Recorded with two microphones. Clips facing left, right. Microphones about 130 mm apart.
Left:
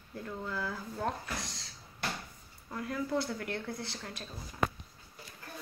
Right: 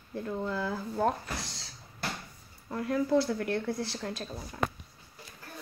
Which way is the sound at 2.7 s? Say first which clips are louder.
Right 7 dB; 50° right (ahead or behind).